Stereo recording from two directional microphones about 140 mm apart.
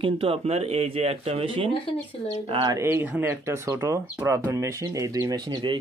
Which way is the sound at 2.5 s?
30° right (ahead or behind).